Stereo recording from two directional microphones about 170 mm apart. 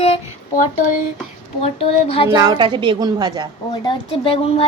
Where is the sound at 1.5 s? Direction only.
35° left (ahead or behind).